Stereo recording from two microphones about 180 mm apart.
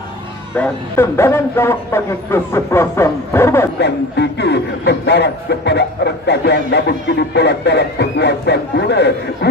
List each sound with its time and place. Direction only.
0.6 s a man's voice: 15° left (ahead or behind)
3.8 s a man's voice: 70° left (ahead or behind)